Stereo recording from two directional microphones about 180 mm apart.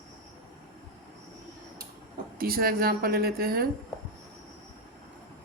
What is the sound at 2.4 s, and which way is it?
Speech, 55° right (ahead or behind).